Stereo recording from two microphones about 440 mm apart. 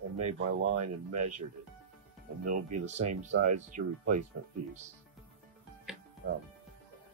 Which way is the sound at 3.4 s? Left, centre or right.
Centre.